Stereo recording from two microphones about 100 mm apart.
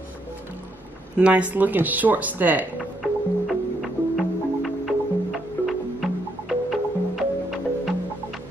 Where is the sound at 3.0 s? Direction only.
Centre (ahead or behind).